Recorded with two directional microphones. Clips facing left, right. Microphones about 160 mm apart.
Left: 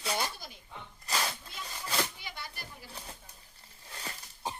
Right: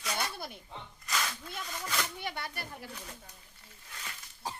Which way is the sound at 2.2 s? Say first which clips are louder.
Right 6 dB; 60° right (ahead or behind).